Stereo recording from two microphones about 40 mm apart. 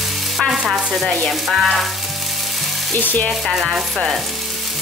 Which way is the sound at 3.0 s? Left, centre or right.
Left.